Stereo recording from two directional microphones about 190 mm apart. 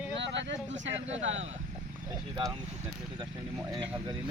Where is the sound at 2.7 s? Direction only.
35° right (ahead or behind).